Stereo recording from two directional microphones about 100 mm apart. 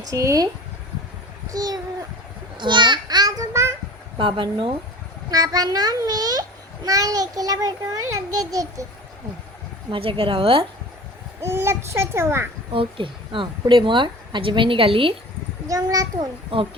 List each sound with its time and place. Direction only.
0.1 s a child's voice: 30° right (ahead or behind)
1.5 s a child's voice: 40° right (ahead or behind)
2.6 s child singing: 50° right (ahead or behind); by 3.8 s 30° right (ahead or behind)
4.2 s a woman's voice: 60° right (ahead or behind)
5.3 s a child's voice: 35° right (ahead or behind)
9.9 s a woman's voice: 65° right (ahead or behind)
11.4 s a child's voice: 25° right (ahead or behind)
12.7 s a woman's voice: 60° right (ahead or behind)
15.6 s a child's voice: 35° right (ahead or behind)
16.1 s a woman's voice: 60° right (ahead or behind)